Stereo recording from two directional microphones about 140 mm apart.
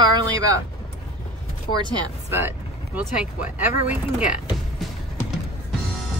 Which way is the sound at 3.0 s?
10° right (ahead or behind).